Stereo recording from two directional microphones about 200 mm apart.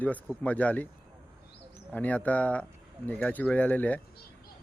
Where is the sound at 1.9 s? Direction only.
10° left (ahead or behind).